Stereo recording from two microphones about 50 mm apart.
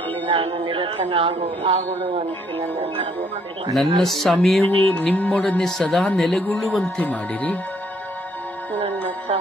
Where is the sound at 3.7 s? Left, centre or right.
Centre.